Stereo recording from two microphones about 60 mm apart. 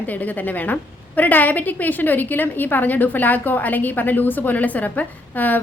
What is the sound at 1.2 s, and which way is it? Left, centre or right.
A woman's voice, left.